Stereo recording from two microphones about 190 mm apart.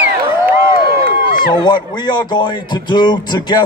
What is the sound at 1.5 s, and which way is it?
A man's voice, 20° left (ahead or behind).